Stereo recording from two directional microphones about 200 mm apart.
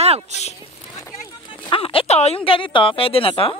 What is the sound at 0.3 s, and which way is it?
Speech, 35° right (ahead or behind).